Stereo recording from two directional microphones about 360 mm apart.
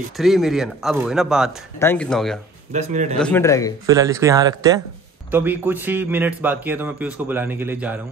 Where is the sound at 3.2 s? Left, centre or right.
Centre.